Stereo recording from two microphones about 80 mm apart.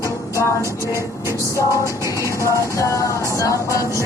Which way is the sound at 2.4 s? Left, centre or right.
Left.